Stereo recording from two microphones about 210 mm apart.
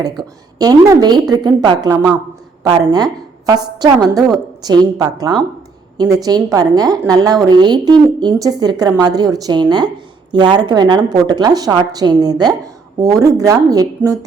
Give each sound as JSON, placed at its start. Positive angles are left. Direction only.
{"t": 0.0, "sound": "a woman's voice", "side_deg": -20}